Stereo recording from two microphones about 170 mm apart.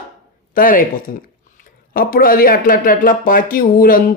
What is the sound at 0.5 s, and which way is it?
Speech, 55° left (ahead or behind).